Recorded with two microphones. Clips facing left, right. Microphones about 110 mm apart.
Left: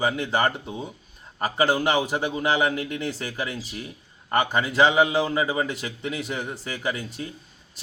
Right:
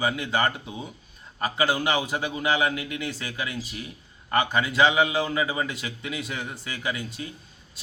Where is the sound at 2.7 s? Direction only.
40° left (ahead or behind).